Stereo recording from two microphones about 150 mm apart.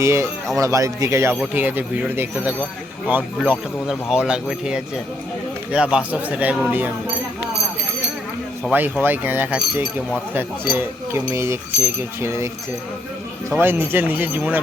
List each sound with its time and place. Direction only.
0.0 s speech: 15° right (ahead or behind)
8.7 s speech: 10° right (ahead or behind)
13.5 s speech: 15° right (ahead or behind)